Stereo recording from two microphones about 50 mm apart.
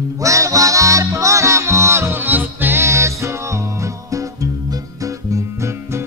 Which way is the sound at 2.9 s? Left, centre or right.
Right.